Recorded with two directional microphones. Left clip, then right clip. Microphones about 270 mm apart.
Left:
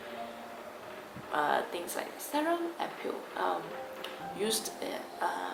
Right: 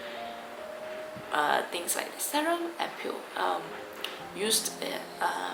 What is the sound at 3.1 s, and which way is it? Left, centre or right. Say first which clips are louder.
Speech: right 2 dB; left.